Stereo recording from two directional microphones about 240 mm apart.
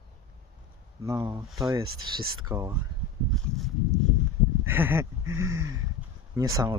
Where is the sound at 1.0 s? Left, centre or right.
Centre.